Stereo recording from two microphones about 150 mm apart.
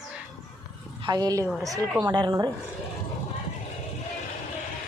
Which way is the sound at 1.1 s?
25° right (ahead or behind).